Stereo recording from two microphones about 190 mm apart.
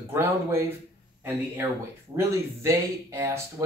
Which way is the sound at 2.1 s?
15° right (ahead or behind).